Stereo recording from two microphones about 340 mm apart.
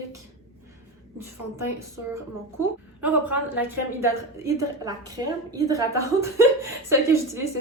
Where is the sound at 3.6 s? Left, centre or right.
Centre.